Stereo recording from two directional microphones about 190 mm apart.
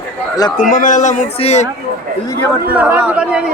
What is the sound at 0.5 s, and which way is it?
A man's voice, 40° left (ahead or behind).